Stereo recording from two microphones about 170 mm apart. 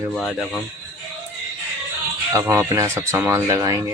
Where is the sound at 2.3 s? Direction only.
15° right (ahead or behind).